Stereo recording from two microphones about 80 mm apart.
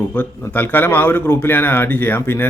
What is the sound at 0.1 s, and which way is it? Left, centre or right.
Speech, left.